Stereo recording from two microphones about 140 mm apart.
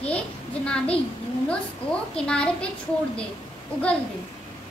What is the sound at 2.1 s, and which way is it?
Speech, 5° left (ahead or behind).